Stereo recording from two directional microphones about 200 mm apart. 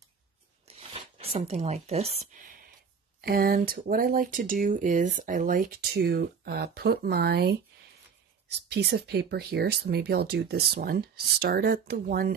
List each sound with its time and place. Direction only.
0.7 s a sound: 30° right (ahead or behind)
3.2 s speech: 50° right (ahead or behind)
8.6 s speech: 55° right (ahead or behind)